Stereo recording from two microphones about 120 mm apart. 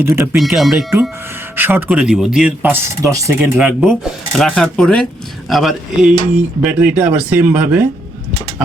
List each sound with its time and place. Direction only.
0.0 s speech: 20° right (ahead or behind)
0.3 s speech: centre (ahead or behind)
1.5 s speech: 15° right (ahead or behind)
3.0 s speech: 25° right (ahead or behind)
3.3 s speech: 10° right (ahead or behind)
4.3 s speech: 5° left (ahead or behind); by 7.9 s 15° right (ahead or behind)